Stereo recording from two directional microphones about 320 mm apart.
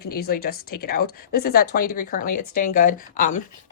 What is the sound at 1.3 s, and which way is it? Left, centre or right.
Speech, left.